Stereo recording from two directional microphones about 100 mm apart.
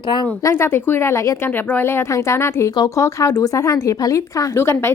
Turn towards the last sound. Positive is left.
turn(degrees=25)  # may be behind; listen again after turning